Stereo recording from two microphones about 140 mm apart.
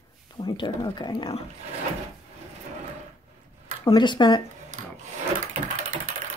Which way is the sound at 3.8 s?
35° left (ahead or behind).